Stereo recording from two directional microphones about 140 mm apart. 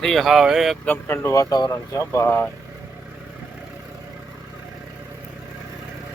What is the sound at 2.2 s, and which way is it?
Speech, 10° left (ahead or behind).